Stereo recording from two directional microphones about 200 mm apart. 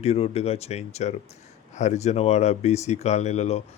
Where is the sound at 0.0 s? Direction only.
30° left (ahead or behind).